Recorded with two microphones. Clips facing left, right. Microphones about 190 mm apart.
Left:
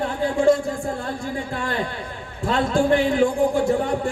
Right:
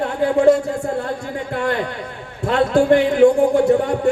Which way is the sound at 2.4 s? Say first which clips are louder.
Right 5 dB; 65° right (ahead or behind).